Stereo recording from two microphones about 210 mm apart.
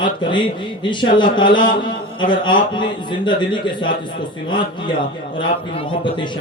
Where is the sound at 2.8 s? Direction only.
20° left (ahead or behind).